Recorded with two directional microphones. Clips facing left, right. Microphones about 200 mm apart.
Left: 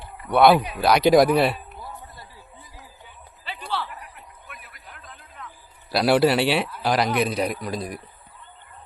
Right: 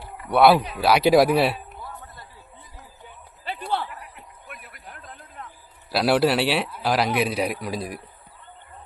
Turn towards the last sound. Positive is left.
turn(degrees=-5)  # may be behind; listen again after turning